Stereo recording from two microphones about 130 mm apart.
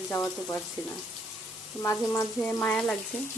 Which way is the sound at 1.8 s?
20° left (ahead or behind).